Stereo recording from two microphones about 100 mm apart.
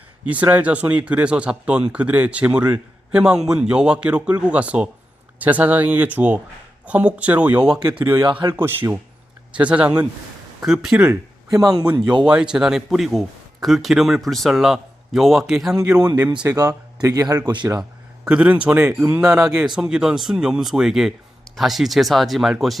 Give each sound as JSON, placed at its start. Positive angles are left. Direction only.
{"t": 0.3, "sound": "speech", "side_deg": -15}
{"t": 8.2, "sound": "speech", "side_deg": -55}
{"t": 8.5, "sound": "a man's voice", "side_deg": -20}
{"t": 11.6, "sound": "speech", "side_deg": -40}
{"t": 12.2, "sound": "a man's voice", "side_deg": -10}
{"t": 16.5, "sound": "speech", "side_deg": -40}
{"t": 18.3, "sound": "a man's voice", "side_deg": -10}